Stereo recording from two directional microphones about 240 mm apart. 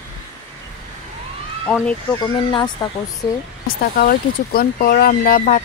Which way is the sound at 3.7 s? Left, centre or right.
Left.